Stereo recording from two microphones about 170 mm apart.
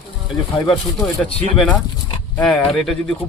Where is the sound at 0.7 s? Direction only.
Centre (ahead or behind).